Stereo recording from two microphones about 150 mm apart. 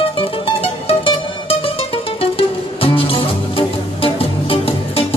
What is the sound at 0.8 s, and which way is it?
Music, 40° left (ahead or behind).